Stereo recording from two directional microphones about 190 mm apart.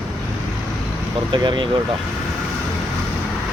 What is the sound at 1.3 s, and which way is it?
Speech, 25° right (ahead or behind).